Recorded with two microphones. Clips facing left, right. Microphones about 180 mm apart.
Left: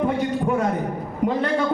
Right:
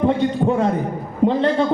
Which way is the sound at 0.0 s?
30° right (ahead or behind).